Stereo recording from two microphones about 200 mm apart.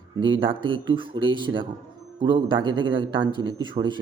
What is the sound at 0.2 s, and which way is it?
Speech, 25° right (ahead or behind).